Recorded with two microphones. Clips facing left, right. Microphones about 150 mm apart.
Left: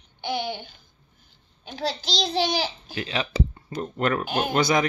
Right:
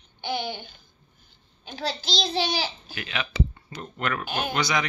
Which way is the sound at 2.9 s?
30° left (ahead or behind).